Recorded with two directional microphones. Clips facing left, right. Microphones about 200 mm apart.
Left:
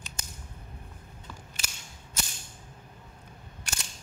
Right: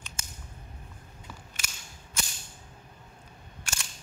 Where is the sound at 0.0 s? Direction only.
35° left (ahead or behind).